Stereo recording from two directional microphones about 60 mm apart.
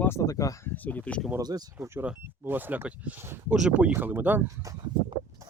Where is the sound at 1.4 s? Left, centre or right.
Right.